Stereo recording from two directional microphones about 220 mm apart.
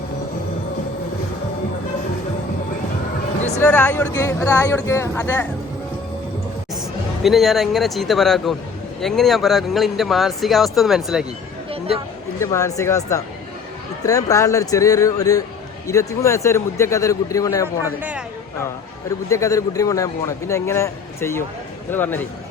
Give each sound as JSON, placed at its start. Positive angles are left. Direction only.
{"t": 3.6, "sound": "a man's voice", "side_deg": 5}
{"t": 7.3, "sound": "a man's voice", "side_deg": 0}
{"t": 12.4, "sound": "a man's voice", "side_deg": 15}
{"t": 19.3, "sound": "a man's voice", "side_deg": 15}